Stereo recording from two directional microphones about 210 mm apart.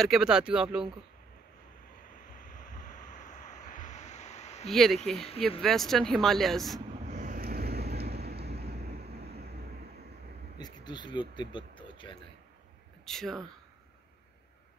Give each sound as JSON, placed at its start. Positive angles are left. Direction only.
{"t": 0.0, "sound": "speech", "side_deg": 0}
{"t": 3.1, "sound": "a sound", "side_deg": 35}
{"t": 4.6, "sound": "speech", "side_deg": 0}
{"t": 7.1, "sound": "vehicle", "side_deg": -35}
{"t": 10.6, "sound": "speech", "side_deg": 20}
{"t": 13.0, "sound": "speech", "side_deg": 0}